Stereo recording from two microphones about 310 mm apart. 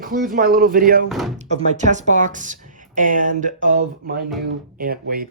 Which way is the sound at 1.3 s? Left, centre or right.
Right.